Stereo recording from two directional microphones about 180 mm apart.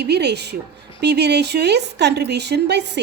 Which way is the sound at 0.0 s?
65° right (ahead or behind).